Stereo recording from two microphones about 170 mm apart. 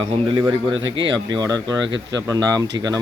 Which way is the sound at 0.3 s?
25° right (ahead or behind).